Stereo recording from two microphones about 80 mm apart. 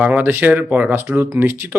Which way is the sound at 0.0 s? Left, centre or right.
Centre.